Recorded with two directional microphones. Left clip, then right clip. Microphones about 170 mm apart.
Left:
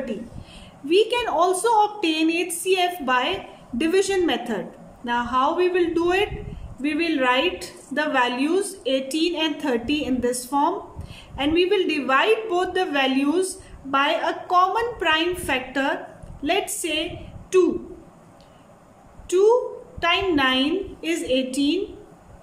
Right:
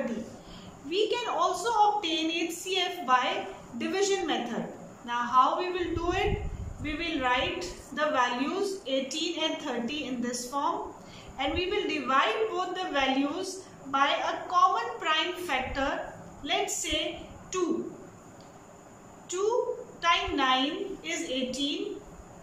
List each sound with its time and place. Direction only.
0.8 s a woman's voice: 50° left (ahead or behind)
19.2 s a woman's voice: 55° left (ahead or behind)